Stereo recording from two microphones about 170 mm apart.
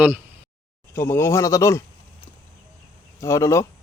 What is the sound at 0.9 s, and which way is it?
Speech, 15° left (ahead or behind).